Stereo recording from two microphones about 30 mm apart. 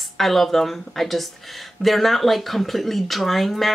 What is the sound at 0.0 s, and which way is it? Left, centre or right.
Speech, centre.